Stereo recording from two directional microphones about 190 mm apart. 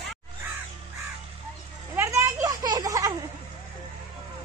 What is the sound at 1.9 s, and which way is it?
Children playing, 15° right (ahead or behind).